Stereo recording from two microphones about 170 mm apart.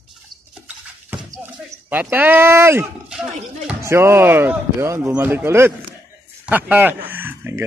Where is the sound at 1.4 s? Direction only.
10° right (ahead or behind).